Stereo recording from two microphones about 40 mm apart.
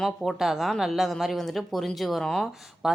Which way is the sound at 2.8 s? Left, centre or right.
Centre.